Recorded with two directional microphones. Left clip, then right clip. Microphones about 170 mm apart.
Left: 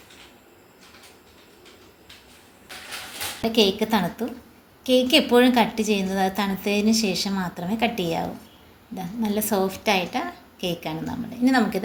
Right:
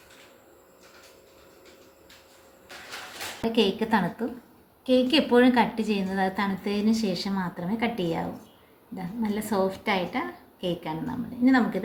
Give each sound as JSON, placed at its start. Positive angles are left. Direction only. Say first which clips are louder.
{"t": 3.4, "sound": "a woman's voice", "louder": "left 4 dB", "side_deg": 25}